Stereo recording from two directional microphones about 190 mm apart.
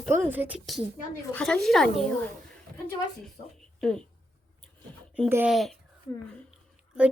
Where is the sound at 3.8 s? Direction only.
5° left (ahead or behind).